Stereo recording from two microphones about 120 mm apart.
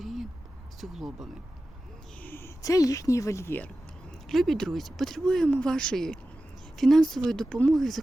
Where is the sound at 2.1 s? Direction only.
15° left (ahead or behind).